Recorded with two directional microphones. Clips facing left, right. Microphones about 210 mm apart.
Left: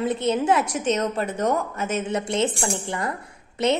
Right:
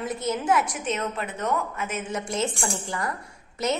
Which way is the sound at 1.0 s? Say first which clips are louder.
Left 6 dB; 40° left (ahead or behind).